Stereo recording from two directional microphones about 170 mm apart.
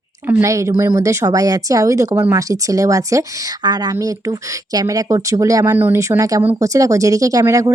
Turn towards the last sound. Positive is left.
turn(degrees=-20)  # may be behind; listen again after turning